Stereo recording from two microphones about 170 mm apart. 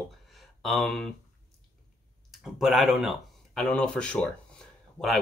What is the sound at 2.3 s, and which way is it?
Speech, centre (ahead or behind).